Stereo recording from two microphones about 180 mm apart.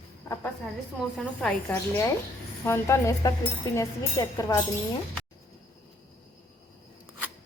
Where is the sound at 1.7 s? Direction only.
15° left (ahead or behind).